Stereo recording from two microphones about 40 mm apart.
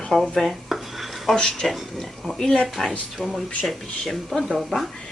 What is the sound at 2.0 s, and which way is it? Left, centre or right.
Oink, centre.